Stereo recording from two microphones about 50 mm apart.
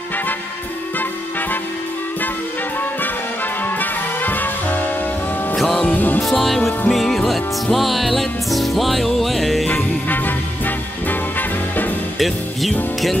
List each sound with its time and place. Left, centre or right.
3.6 s music: left
5.6 s music: centre
5.9 s music: left
6.2 s music: centre
10.0 s music: left